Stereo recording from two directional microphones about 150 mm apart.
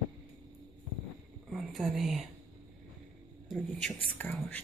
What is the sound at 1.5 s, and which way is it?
Speech, centre (ahead or behind).